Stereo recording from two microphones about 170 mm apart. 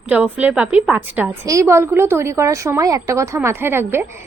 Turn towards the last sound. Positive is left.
turn(degrees=-15)  # may be behind; listen again after turning